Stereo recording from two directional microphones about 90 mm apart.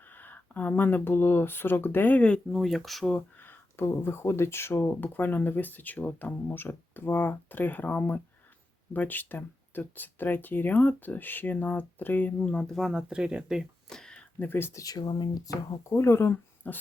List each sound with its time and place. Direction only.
0.1 s speech: 20° left (ahead or behind)
2.5 s speech: centre (ahead or behind)
3.2 s speech: 20° left (ahead or behind); by 13.0 s centre (ahead or behind)
13.0 s speech: 10° right (ahead or behind)
13.9 s speech: 10° left (ahead or behind); by 14.8 s 25° left (ahead or behind)
14.8 s speech: 45° left (ahead or behind)
15.8 s speech: 30° left (ahead or behind)